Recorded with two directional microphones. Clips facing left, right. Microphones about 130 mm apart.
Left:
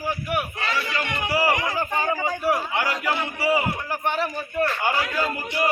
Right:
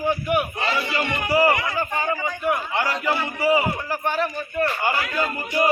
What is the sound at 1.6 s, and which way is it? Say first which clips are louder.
A man's voice: even; 20° left (ahead or behind).